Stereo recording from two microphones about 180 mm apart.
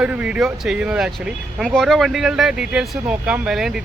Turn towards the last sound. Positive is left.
turn(degrees=0)  # may be behind; listen again after turning